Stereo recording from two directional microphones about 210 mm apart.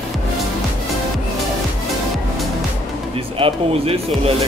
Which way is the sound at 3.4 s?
25° right (ahead or behind).